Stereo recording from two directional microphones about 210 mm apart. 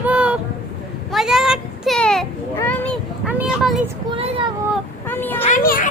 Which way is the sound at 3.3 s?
5° right (ahead or behind).